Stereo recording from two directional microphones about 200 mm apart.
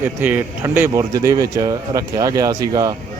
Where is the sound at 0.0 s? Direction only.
10° right (ahead or behind).